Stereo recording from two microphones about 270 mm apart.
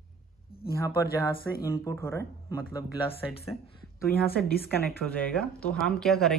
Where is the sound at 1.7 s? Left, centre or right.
Centre.